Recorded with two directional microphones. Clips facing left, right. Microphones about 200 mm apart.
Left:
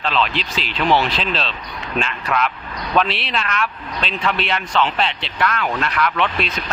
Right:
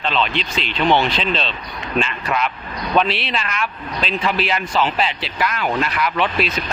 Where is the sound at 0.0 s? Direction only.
Centre (ahead or behind).